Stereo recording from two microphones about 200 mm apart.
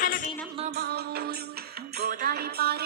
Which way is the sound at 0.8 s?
55° right (ahead or behind).